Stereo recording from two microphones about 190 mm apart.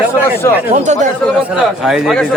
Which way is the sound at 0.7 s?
40° right (ahead or behind).